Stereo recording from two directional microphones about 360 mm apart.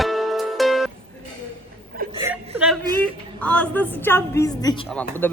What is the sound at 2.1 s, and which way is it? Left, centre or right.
A woman's voice, centre.